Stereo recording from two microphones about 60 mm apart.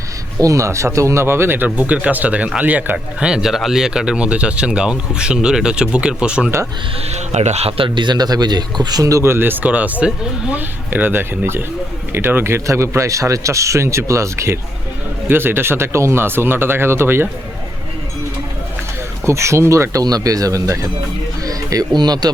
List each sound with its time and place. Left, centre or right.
0.3 s speech: right
3.2 s speech: centre
7.9 s speech: right
9.0 s speech: right
9.2 s speech: right
9.6 s speech: right
15.3 s speech: right
19.2 s speech: right
21.4 s speech: right